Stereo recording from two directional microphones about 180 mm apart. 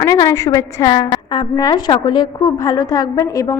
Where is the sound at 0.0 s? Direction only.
20° left (ahead or behind).